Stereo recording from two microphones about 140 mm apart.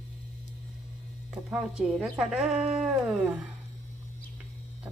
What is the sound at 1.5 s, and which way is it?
A woman's voice, 10° right (ahead or behind).